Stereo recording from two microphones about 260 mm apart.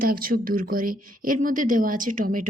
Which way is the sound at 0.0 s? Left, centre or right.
Right.